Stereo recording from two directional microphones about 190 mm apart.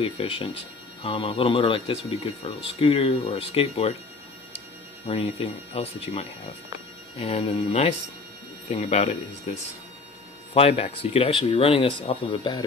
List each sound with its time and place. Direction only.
0.0 s speech: 30° left (ahead or behind)
5.0 s speech: 30° left (ahead or behind)